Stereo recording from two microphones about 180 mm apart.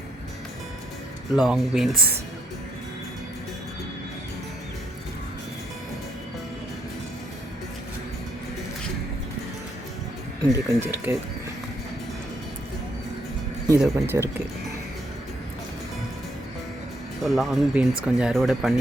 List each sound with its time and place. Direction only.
1.3 s speech: centre (ahead or behind)
10.5 s speech: 15° right (ahead or behind)
13.7 s speech: 15° right (ahead or behind)
17.2 s speech: centre (ahead or behind)